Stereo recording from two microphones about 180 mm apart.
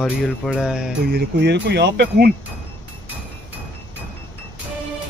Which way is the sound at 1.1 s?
70° right (ahead or behind).